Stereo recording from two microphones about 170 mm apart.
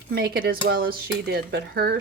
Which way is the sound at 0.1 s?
65° right (ahead or behind).